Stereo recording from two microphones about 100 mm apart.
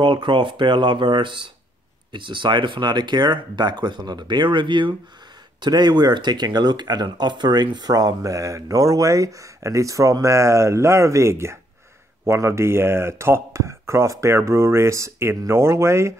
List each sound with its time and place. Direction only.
0.0 s speech: 55° right (ahead or behind); by 16.2 s 30° right (ahead or behind)